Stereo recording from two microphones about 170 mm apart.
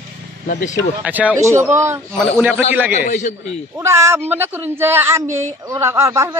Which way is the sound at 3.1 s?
45° left (ahead or behind).